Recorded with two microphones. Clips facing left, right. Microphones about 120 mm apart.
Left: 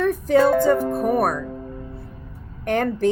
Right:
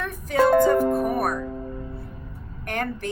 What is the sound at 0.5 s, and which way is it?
Music, 70° right (ahead or behind).